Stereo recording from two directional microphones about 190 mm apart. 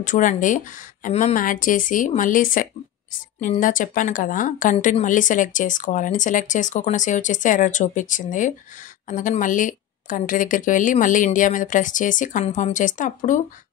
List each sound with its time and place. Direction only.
0.0 s a woman's voice: 40° left (ahead or behind)